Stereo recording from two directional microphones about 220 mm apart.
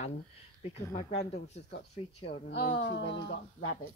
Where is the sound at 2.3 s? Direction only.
55° left (ahead or behind).